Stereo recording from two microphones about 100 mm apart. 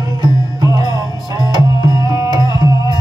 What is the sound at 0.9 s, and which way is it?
Music, 40° left (ahead or behind).